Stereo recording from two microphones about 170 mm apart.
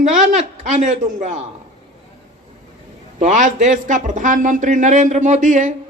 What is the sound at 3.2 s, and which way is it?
Speech, 45° right (ahead or behind).